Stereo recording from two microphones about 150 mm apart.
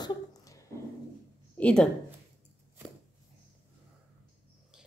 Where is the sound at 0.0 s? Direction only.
25° left (ahead or behind).